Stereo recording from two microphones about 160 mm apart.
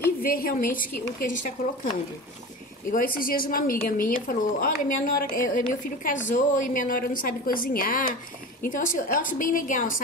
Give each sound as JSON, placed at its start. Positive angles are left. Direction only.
{"t": 0.2, "sound": "a woman's voice", "side_deg": 65}
{"t": 2.9, "sound": "a woman's voice", "side_deg": 60}